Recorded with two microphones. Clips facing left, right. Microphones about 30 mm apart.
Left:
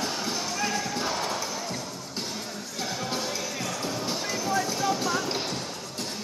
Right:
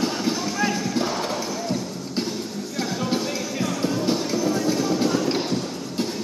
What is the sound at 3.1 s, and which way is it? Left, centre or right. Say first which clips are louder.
Music: right 5 dB; centre.